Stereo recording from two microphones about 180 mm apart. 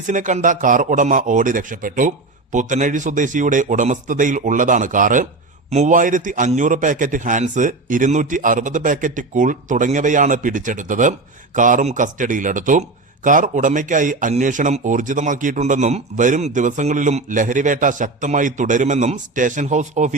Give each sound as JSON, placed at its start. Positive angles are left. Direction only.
{"t": 0.1, "sound": "a man's voice", "side_deg": -45}